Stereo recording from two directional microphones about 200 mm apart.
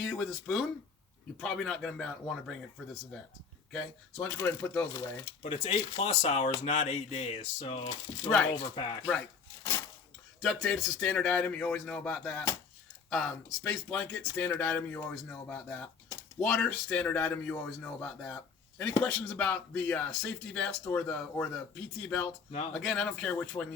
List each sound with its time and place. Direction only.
0.0 s a man's voice: centre (ahead or behind)
4.2 s speech: 10° left (ahead or behind)
5.4 s speech: 30° left (ahead or behind)
10.4 s a man's voice: 5° left (ahead or behind)